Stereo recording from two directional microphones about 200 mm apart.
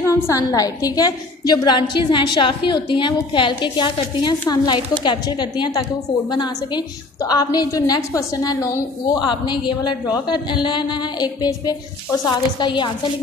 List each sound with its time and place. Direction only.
0.0 s a woman's voice: 15° left (ahead or behind)